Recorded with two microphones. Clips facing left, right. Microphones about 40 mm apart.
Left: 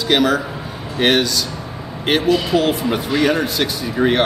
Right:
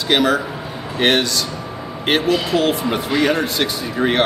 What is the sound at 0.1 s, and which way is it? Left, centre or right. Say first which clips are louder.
A man's voice: even; centre.